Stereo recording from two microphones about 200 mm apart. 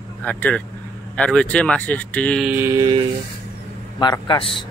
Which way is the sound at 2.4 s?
10° right (ahead or behind).